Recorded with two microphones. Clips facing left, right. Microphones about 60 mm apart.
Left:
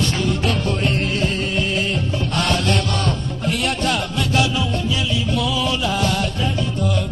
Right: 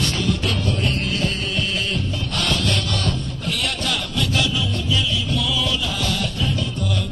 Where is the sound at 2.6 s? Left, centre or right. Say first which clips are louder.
Left 3 dB; left.